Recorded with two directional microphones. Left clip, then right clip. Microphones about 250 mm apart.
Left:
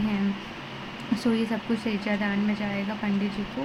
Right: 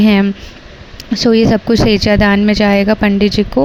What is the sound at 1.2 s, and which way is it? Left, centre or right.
A woman's voice, right.